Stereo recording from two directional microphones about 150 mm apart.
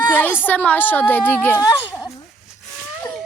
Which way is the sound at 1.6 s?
20° left (ahead or behind).